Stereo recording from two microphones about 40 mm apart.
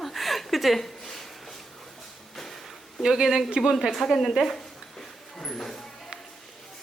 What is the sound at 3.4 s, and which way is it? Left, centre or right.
Speech, right.